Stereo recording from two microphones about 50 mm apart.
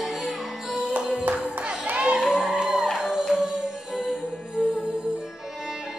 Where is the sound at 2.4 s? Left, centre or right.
Centre.